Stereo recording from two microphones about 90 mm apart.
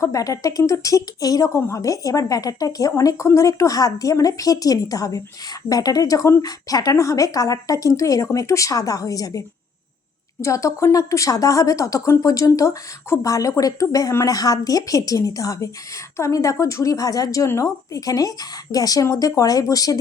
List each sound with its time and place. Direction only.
0.0 s a woman's voice: 40° left (ahead or behind)
10.4 s a woman's voice: 35° left (ahead or behind)